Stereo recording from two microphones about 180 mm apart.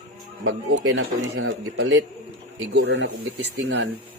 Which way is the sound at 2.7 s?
75° right (ahead or behind).